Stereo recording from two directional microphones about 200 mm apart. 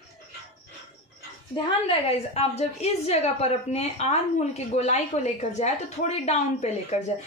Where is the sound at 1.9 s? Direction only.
30° left (ahead or behind).